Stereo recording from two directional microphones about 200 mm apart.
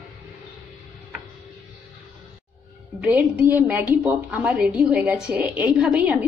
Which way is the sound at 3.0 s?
5° right (ahead or behind).